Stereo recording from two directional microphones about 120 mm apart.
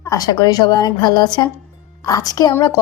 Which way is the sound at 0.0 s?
30° left (ahead or behind).